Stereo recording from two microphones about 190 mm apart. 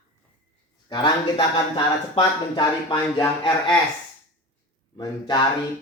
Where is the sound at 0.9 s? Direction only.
20° left (ahead or behind).